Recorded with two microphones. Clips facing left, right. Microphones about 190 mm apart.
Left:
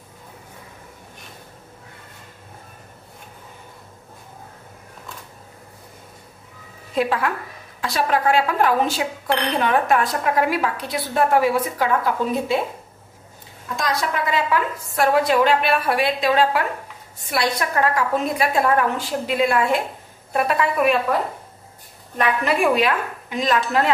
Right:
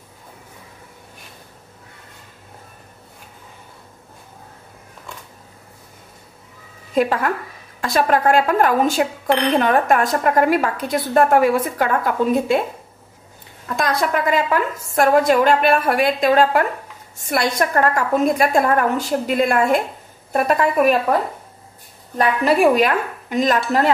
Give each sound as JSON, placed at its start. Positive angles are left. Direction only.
{"t": 7.0, "sound": "a woman's voice", "side_deg": -45}
{"t": 13.7, "sound": "a woman's voice", "side_deg": -55}
{"t": 22.2, "sound": "a woman's voice", "side_deg": -40}